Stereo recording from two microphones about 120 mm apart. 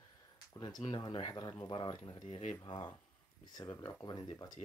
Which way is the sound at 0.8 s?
40° left (ahead or behind).